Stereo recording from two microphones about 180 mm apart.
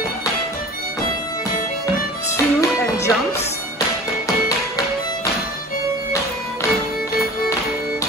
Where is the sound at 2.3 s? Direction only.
15° left (ahead or behind).